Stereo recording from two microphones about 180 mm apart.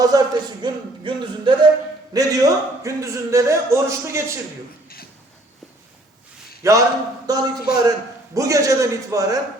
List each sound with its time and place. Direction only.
0.0 s a man's voice: 20° right (ahead or behind)
6.6 s a man's voice: 15° right (ahead or behind)